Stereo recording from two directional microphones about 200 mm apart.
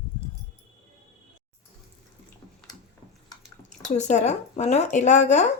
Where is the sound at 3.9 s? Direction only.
35° left (ahead or behind).